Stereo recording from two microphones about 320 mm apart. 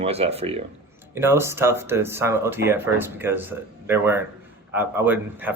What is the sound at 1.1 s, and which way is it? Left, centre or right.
Speech, centre.